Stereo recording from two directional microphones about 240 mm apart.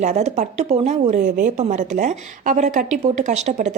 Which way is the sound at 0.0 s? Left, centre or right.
Right.